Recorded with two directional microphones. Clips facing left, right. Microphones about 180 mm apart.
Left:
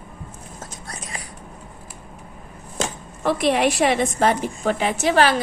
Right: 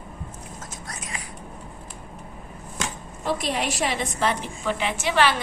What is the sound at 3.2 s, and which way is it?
A woman's voice, 65° left (ahead or behind).